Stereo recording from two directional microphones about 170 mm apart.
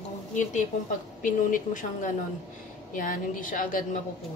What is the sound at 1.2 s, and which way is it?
A woman's voice, 50° left (ahead or behind).